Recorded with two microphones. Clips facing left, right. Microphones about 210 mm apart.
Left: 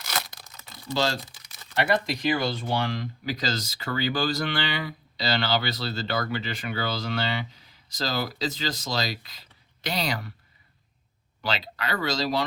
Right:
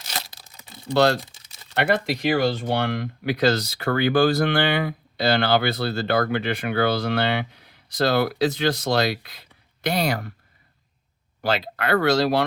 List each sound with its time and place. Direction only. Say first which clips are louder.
0.5 s typing: right 4 dB; 15° right (ahead or behind)
0.9 s speech: right 8 dB; 60° right (ahead or behind)
1.2 s typing: right 1 dB; 25° right (ahead or behind)
1.7 s speech: right 3 dB; 60° right (ahead or behind)
11.4 s speech: right 7 dB; 50° right (ahead or behind)